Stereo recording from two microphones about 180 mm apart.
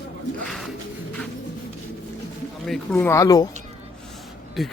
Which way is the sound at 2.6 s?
5° left (ahead or behind).